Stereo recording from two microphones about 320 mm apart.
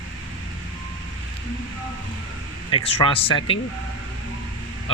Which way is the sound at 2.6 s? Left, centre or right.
Centre.